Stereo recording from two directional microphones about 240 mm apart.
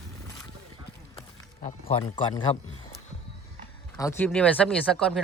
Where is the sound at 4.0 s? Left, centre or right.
Centre.